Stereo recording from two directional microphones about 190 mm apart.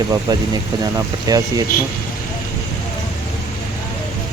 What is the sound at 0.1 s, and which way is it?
Speech, 20° right (ahead or behind).